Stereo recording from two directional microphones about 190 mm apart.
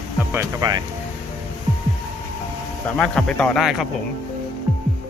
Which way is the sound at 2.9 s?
5° left (ahead or behind).